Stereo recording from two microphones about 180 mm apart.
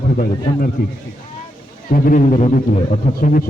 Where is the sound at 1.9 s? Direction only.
50° left (ahead or behind).